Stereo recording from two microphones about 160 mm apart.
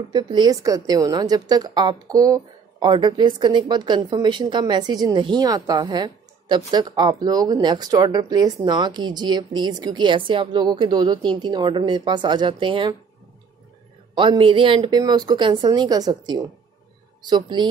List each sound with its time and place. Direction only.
0.1 s a woman's voice: 25° right (ahead or behind)
14.1 s a woman's voice: 30° right (ahead or behind)